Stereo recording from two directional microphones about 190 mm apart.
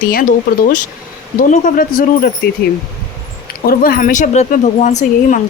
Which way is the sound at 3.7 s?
50° left (ahead or behind).